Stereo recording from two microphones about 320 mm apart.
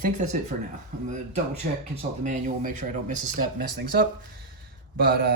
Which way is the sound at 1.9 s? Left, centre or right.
Right.